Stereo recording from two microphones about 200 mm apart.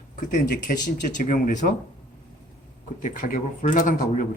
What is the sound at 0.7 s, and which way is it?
Speech, 40° left (ahead or behind).